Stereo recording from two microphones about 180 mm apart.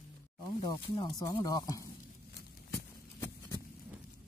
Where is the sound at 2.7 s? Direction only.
15° left (ahead or behind).